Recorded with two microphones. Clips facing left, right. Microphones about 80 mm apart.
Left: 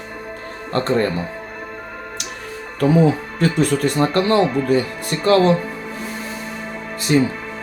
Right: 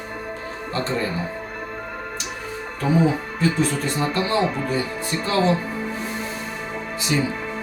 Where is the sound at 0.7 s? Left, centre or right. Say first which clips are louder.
Left 7 dB; left.